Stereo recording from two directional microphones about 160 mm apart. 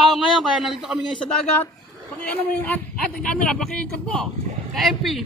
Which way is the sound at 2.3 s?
10° left (ahead or behind).